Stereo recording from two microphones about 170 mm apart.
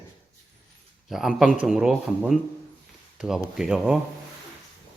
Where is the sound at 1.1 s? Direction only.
Centre (ahead or behind).